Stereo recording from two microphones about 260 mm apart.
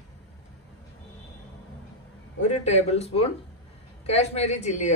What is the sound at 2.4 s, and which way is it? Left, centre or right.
A woman's voice, left.